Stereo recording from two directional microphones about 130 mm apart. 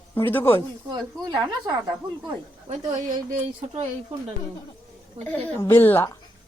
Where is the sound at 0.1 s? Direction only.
15° left (ahead or behind).